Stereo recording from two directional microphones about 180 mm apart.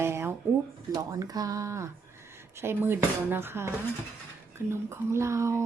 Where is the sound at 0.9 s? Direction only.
20° right (ahead or behind).